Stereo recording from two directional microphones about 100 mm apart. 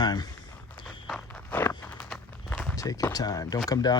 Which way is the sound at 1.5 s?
20° left (ahead or behind).